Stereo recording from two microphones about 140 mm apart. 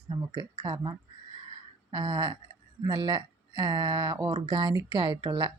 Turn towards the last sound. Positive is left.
turn(degrees=-30)  # may be behind; listen again after turning